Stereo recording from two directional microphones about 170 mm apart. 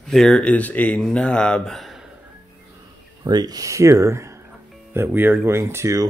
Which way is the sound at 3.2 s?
25° right (ahead or behind).